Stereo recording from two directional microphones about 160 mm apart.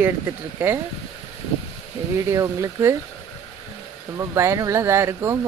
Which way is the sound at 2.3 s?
20° right (ahead or behind).